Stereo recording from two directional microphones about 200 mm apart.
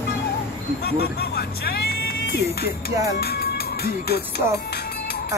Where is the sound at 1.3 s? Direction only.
50° left (ahead or behind).